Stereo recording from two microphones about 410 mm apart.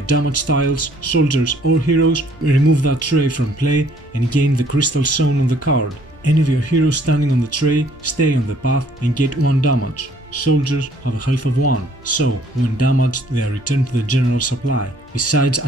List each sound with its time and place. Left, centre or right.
0.0 s speech: left